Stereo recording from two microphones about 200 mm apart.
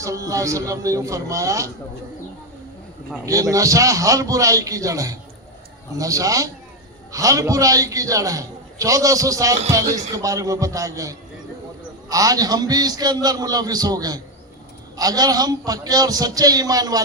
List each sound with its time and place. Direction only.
0.0 s a man's voice: 15° right (ahead or behind)
3.2 s a man's voice: 15° right (ahead or behind)